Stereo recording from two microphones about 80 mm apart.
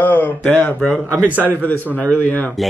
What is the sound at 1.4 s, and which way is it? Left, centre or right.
Speech, left.